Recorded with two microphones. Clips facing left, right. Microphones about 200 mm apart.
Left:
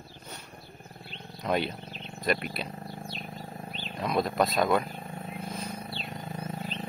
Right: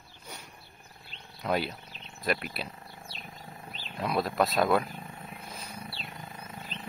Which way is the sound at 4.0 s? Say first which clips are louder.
Left 1 dB; 5° right (ahead or behind).